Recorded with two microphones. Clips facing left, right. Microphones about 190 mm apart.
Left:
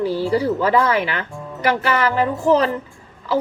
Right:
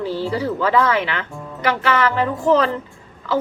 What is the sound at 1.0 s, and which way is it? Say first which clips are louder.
Speech: left 1 dB; 40° left (ahead or behind).